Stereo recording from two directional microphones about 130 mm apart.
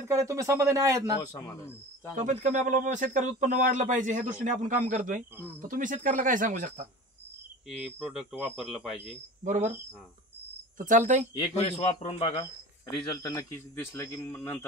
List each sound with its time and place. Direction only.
0.1 s speech: 25° right (ahead or behind)
1.2 s a man's voice: 30° left (ahead or behind)
2.1 s speech: 70° right (ahead or behind)
7.8 s speech: 5° right (ahead or behind)
9.4 s speech: 70° right (ahead or behind)
10.8 s speech: 75° right (ahead or behind)
11.6 s a man's voice: 55° left (ahead or behind)
13.1 s a man's voice: 25° left (ahead or behind)